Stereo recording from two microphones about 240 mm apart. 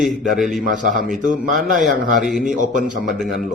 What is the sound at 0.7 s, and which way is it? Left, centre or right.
Mantra, right.